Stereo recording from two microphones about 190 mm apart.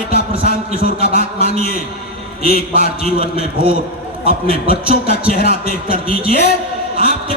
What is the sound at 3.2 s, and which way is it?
A man's voice, 30° right (ahead or behind).